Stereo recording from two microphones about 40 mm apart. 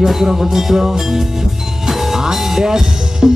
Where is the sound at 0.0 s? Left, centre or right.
Centre.